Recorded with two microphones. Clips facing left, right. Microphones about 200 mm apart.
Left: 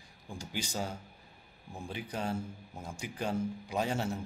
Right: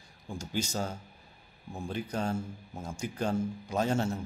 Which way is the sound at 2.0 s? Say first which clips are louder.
Right 2 dB; 45° right (ahead or behind).